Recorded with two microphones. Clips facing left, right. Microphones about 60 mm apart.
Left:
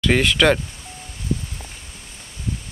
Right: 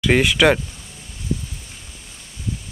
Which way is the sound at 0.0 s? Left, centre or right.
Centre.